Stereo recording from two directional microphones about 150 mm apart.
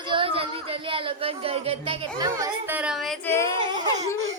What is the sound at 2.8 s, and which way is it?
Speech, 5° right (ahead or behind).